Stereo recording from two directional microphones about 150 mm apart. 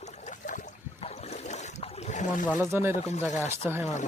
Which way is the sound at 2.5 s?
15° right (ahead or behind).